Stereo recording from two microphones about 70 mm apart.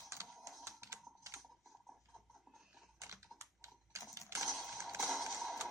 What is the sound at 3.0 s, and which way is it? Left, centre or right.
Typing, right.